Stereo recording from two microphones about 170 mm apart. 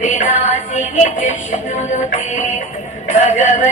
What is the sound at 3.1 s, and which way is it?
Music, 45° left (ahead or behind).